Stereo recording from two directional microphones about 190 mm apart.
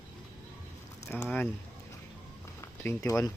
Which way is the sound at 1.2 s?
10° left (ahead or behind).